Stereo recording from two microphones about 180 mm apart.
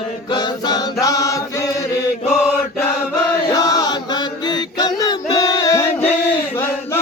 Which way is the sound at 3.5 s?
20° left (ahead or behind).